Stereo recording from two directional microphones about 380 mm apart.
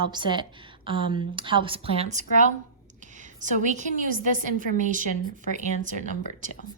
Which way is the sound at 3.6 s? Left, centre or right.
Centre.